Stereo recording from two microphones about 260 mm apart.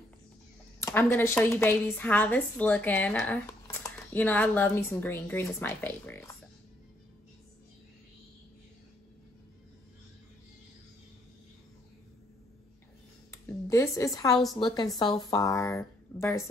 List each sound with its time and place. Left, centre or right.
0.7 s a woman's voice: centre
13.3 s a sound: centre
14.3 s a woman's voice: centre
14.6 s a woman's voice: centre